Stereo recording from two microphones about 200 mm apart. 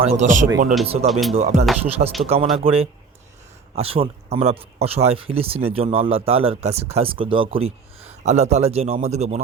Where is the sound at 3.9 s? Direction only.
30° right (ahead or behind).